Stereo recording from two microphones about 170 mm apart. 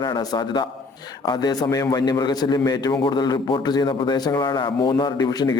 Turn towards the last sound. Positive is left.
turn(degrees=25)  # may be behind; listen again after turning